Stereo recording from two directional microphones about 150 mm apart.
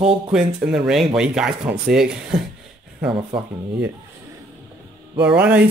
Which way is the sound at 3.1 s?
35° right (ahead or behind).